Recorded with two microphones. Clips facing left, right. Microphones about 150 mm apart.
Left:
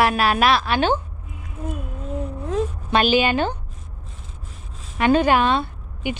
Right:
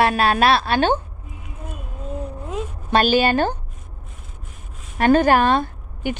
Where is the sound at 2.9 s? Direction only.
40° right (ahead or behind).